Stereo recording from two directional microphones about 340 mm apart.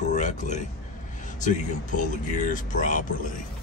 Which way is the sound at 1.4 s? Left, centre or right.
Left.